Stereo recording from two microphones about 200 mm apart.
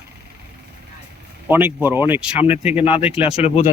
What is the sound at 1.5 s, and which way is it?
Speech, 10° right (ahead or behind).